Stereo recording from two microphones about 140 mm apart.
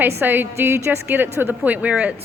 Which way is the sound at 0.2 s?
15° right (ahead or behind).